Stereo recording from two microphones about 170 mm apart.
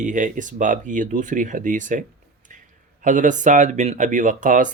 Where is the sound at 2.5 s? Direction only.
50° right (ahead or behind).